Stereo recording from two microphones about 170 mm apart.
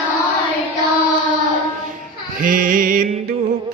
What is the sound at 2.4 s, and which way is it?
Music, 55° right (ahead or behind).